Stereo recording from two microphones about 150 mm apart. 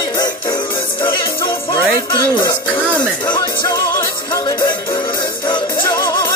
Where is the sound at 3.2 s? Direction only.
30° left (ahead or behind).